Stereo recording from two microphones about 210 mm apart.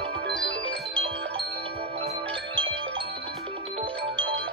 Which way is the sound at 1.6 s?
25° right (ahead or behind).